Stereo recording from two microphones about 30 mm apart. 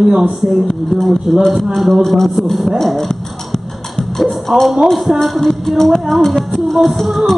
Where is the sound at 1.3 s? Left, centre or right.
Centre.